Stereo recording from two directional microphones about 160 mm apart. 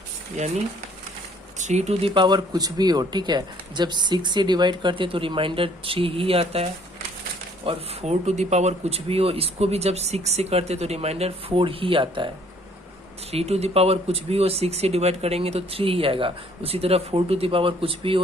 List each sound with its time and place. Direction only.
1.5 s speech: 45° right (ahead or behind)
13.3 s speech: 40° right (ahead or behind)